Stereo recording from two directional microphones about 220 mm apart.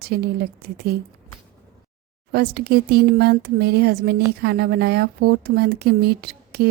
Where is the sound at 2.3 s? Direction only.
45° right (ahead or behind).